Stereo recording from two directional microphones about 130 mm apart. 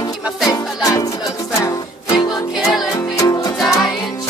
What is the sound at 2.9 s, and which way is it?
Music, 25° left (ahead or behind).